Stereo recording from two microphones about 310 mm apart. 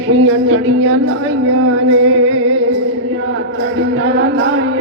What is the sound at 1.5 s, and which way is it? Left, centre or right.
Music, right.